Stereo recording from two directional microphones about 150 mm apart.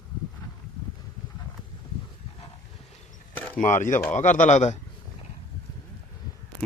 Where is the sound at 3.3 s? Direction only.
10° left (ahead or behind).